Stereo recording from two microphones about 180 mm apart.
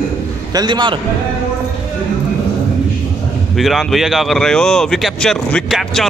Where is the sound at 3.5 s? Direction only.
Centre (ahead or behind).